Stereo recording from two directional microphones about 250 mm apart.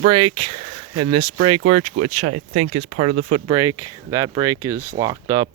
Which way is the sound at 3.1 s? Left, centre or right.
Right.